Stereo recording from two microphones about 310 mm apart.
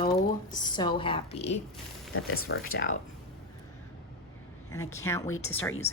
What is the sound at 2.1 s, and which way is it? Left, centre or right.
Speech, left.